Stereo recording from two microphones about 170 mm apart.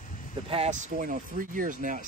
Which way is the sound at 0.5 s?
40° right (ahead or behind).